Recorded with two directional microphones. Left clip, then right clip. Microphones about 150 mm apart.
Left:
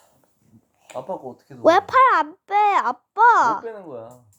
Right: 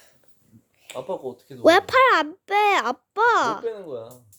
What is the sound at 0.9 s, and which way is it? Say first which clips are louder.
A child's voice: even; 25° right (ahead or behind).